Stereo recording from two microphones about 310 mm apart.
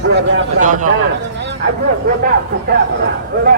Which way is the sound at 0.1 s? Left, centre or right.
Right.